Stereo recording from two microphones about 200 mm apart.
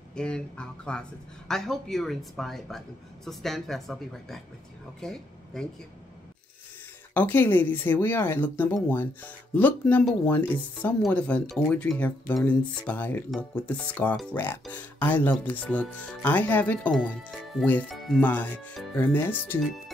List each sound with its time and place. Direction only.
0.1 s speech: 5° left (ahead or behind)
7.2 s speech: 10° left (ahead or behind)